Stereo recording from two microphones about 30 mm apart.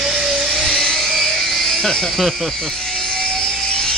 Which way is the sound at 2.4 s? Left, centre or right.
Centre.